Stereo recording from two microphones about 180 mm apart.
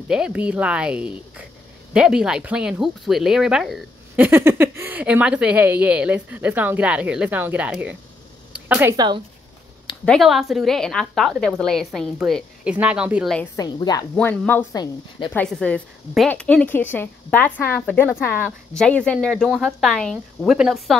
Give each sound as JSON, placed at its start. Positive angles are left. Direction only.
{"t": 0.1, "sound": "a woman's voice", "side_deg": -5}
{"t": 4.3, "sound": "a woman's voice", "side_deg": -15}
{"t": 10.0, "sound": "a woman's voice", "side_deg": 0}
{"t": 13.6, "sound": "speech", "side_deg": 20}
{"t": 14.1, "sound": "a woman's voice", "side_deg": 5}
{"t": 14.7, "sound": "speech", "side_deg": 25}
{"t": 15.3, "sound": "a woman's voice", "side_deg": 5}